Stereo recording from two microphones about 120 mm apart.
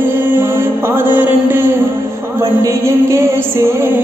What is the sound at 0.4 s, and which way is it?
Music, 20° right (ahead or behind).